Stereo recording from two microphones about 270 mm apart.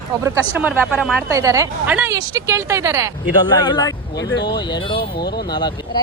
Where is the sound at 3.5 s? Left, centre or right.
Centre.